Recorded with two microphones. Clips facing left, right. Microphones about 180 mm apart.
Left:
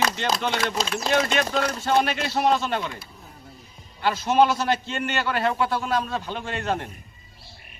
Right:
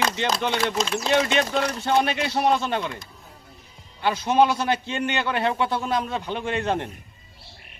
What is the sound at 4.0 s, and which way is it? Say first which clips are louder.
A man's voice: even; 20° right (ahead or behind).